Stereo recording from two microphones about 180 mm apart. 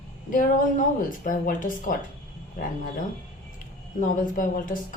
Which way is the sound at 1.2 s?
50° left (ahead or behind).